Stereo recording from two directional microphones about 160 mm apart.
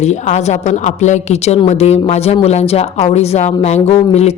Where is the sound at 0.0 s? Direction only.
45° left (ahead or behind).